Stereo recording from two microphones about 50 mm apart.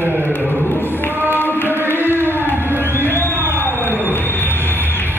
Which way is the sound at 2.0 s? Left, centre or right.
Right.